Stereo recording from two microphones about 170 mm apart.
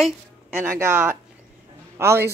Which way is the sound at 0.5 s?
15° right (ahead or behind).